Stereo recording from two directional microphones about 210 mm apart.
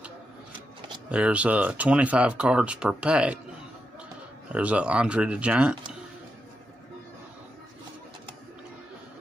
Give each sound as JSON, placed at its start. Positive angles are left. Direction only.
{"t": 1.0, "sound": "speech", "side_deg": -5}
{"t": 4.5, "sound": "speech", "side_deg": -5}